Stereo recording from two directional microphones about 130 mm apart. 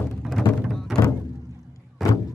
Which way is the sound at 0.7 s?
Centre (ahead or behind).